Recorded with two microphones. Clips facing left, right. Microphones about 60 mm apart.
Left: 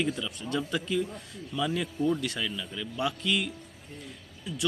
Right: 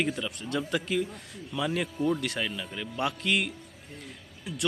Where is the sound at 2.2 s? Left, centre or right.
Right.